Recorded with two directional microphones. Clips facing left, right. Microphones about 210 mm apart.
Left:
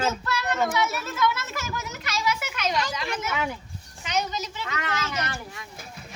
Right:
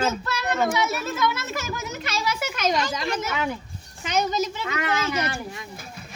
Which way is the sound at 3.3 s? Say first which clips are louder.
Right 2 dB; 10° left (ahead or behind).